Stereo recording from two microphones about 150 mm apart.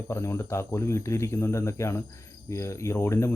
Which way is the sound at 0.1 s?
20° left (ahead or behind).